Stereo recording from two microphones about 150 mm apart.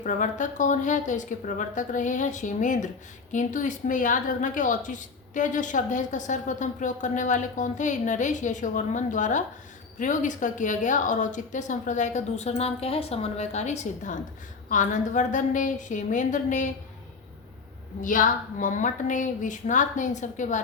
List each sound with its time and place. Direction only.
0.0 s a woman's voice: 60° left (ahead or behind)
18.0 s a woman's voice: 60° left (ahead or behind)